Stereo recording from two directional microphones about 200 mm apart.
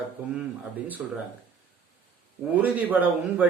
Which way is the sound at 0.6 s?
5° right (ahead or behind).